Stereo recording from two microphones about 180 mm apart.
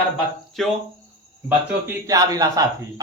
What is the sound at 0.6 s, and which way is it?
Speech, centre (ahead or behind).